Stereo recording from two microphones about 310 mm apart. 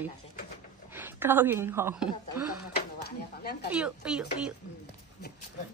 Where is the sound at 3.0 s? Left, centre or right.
Left.